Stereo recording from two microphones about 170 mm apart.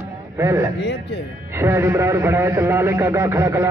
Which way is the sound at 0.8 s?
90° left.